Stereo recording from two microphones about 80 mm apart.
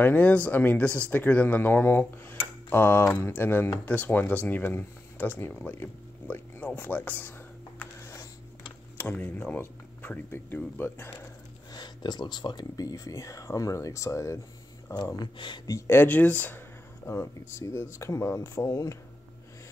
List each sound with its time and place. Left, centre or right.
0.0 s speech: left
8.9 s speech: left
11.7 s speech: left
15.1 s speech: left
15.9 s speech: left
18.7 s speech: left